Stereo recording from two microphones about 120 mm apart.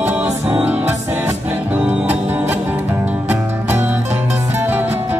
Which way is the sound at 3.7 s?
15° right (ahead or behind).